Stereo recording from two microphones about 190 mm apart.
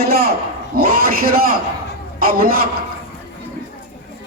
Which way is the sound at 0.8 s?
50° right (ahead or behind).